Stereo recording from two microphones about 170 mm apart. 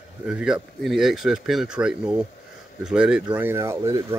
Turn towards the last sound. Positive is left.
turn(degrees=-20)  # may be behind; listen again after turning